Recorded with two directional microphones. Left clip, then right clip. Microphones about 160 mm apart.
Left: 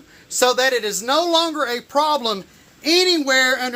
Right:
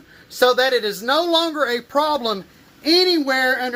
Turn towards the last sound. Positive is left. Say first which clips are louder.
# left 2 dB
turn(degrees=5)  # may be behind; listen again after turning